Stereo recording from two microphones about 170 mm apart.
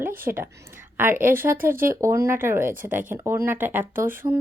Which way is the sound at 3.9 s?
55° right (ahead or behind).